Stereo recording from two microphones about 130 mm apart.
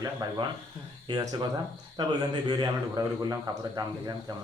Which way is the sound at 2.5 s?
30° right (ahead or behind).